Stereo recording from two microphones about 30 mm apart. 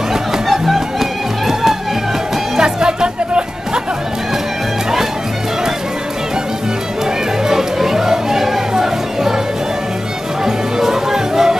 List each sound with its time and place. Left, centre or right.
0.5 s music: centre
2.5 s music: right
7.4 s music: centre
10.4 s music: centre